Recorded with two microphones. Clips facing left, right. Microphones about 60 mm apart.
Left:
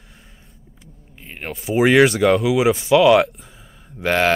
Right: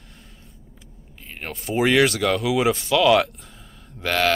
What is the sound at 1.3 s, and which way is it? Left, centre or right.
Speech, centre.